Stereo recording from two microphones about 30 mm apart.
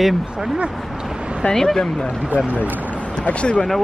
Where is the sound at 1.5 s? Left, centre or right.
Centre.